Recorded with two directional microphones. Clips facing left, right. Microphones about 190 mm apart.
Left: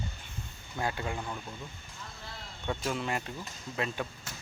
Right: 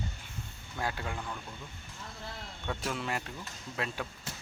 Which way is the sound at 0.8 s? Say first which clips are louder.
Left 2 dB; centre (ahead or behind).